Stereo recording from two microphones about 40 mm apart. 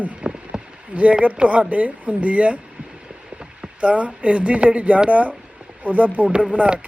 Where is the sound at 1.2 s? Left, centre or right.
Right.